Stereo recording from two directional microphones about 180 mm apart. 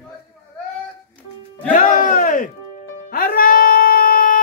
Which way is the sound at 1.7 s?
45° left (ahead or behind).